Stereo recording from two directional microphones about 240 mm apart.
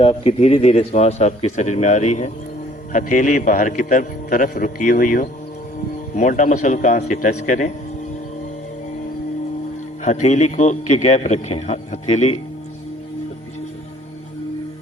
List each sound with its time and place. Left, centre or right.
0.0 s a man's voice: left
10.0 s a man's voice: left